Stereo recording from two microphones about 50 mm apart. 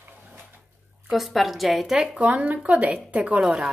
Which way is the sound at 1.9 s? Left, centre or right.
Centre.